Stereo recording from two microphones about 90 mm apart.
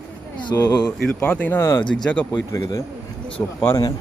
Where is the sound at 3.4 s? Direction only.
25° left (ahead or behind).